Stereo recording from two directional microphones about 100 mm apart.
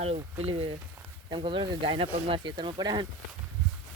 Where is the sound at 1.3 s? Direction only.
55° right (ahead or behind).